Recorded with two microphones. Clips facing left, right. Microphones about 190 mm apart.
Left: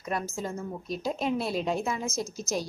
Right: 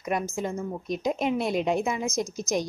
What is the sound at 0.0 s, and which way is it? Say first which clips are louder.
A woman's voice: right 4 dB; 15° right (ahead or behind).